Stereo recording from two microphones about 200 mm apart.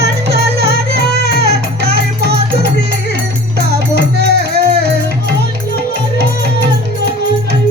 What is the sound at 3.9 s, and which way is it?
Music, 55° right (ahead or behind).